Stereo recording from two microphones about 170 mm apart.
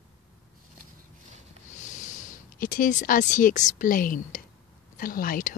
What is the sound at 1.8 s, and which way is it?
Speech, 45° left (ahead or behind).